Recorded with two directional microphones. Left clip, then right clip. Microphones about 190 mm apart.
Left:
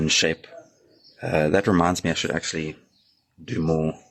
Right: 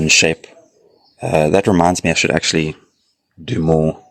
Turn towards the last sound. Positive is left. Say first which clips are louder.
# right 9 dB
turn(degrees=-35)  # may be behind; listen again after turning